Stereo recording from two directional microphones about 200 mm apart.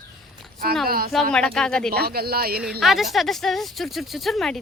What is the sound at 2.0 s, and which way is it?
Speech, 50° right (ahead or behind).